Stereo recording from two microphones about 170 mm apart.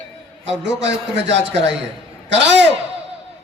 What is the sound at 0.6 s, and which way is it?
A man's voice, 90° right.